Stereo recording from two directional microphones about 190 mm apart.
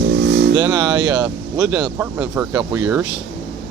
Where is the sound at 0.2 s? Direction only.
60° right (ahead or behind).